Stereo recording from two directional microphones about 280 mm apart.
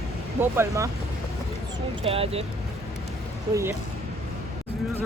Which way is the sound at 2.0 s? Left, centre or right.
Right.